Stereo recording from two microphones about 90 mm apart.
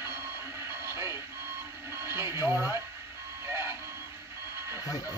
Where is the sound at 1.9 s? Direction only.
30° right (ahead or behind).